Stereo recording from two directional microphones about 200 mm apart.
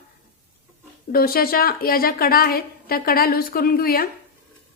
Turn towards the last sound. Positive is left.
turn(degrees=50)  # may be behind; listen again after turning